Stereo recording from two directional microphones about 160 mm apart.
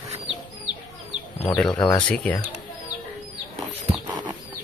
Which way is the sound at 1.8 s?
30° left (ahead or behind).